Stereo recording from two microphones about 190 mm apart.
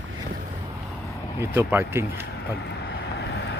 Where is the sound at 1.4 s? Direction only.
10° right (ahead or behind).